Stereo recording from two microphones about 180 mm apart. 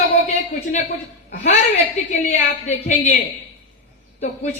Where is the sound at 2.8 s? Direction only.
40° left (ahead or behind).